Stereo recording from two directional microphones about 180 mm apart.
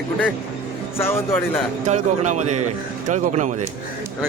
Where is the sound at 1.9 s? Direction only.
40° right (ahead or behind).